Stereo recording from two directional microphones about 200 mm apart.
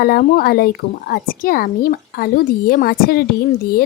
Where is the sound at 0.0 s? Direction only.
50° left (ahead or behind).